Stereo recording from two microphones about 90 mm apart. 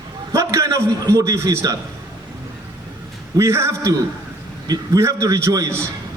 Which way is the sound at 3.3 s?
35° right (ahead or behind).